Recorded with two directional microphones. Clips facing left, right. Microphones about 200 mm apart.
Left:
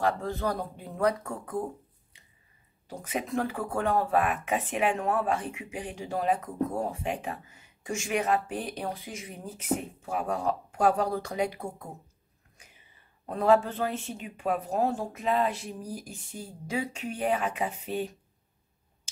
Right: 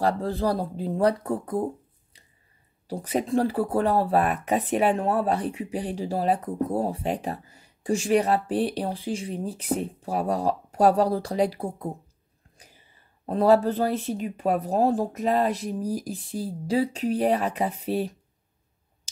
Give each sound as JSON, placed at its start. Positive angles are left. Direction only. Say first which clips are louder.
{"t": 0.0, "sound": "speech", "louder": "right 4 dB", "side_deg": -30}
{"t": 2.9, "sound": "speech", "louder": "right 7 dB", "side_deg": -35}
{"t": 12.5, "sound": "a sound", "louder": "right 4 dB", "side_deg": -35}
{"t": 13.3, "sound": "speech", "louder": "right 4 dB", "side_deg": -35}